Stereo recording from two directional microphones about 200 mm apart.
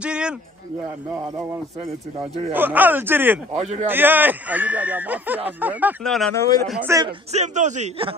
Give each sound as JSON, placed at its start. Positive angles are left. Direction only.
{"t": 0.0, "sound": "a sound", "side_deg": -5}
{"t": 1.1, "sound": "speech", "side_deg": -15}
{"t": 2.5, "sound": "speech", "side_deg": -10}
{"t": 3.5, "sound": "a man's voice", "side_deg": -35}
{"t": 3.8, "sound": "speech", "side_deg": -10}
{"t": 6.0, "sound": "speech", "side_deg": 5}
{"t": 6.7, "sound": "speech", "side_deg": -10}
{"t": 7.3, "sound": "a man's voice", "side_deg": -35}